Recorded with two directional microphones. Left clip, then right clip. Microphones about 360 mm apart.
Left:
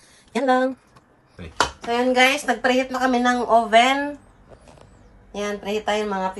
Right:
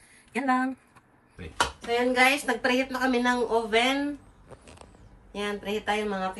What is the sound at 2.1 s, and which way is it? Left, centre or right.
A woman's voice, centre.